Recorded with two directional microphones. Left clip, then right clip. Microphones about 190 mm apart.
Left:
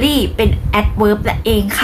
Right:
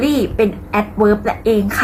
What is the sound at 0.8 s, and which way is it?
Speech, 25° left (ahead or behind).